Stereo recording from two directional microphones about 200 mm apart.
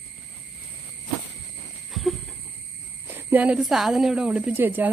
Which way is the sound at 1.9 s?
Centre (ahead or behind).